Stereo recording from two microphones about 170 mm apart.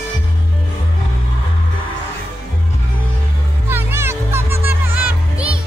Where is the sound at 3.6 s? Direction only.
15° right (ahead or behind).